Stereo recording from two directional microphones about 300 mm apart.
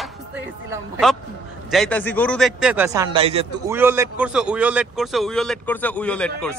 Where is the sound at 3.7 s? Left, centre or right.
Centre.